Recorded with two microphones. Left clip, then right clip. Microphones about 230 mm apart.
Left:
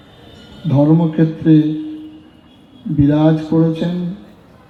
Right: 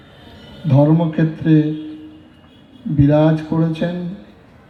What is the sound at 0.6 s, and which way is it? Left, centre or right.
Speech, right.